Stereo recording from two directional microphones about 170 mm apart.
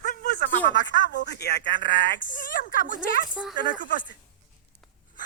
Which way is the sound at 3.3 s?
5° right (ahead or behind).